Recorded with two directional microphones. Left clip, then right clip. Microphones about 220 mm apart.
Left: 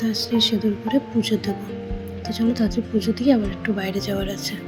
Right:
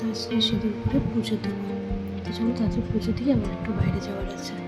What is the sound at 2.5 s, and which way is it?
Speech, 15° left (ahead or behind).